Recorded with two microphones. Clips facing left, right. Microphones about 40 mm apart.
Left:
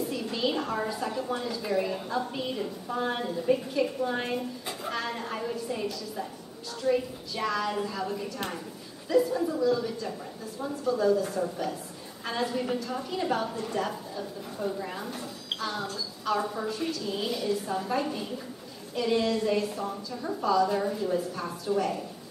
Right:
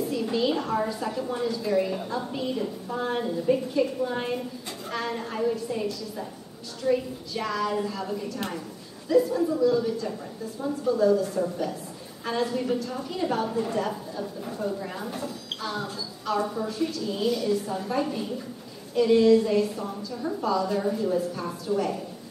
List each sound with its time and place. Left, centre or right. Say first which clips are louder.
0.1 s a woman's voice: right 4 dB; centre
12.3 s a woman's voice: right 3 dB; centre